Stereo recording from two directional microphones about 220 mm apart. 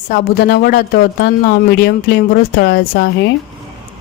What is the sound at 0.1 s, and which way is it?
Speech, 45° left (ahead or behind).